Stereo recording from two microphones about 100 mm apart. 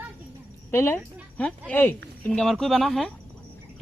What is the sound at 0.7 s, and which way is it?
Speech, 25° left (ahead or behind).